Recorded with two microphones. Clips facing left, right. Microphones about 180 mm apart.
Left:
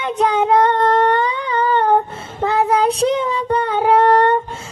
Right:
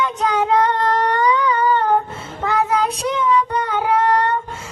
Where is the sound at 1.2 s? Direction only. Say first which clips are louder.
Right 2 dB; 30° left (ahead or behind).